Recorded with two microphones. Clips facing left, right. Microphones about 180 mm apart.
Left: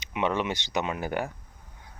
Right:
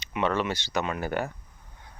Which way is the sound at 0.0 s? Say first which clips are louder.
Right 1 dB; 15° left (ahead or behind).